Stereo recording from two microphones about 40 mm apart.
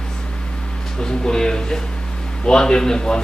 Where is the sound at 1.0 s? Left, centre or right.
Centre.